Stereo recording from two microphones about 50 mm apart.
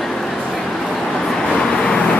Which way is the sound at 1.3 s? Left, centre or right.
Centre.